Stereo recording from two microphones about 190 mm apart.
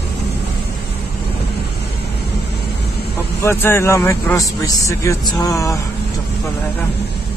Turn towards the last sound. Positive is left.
turn(degrees=15)  # may be behind; listen again after turning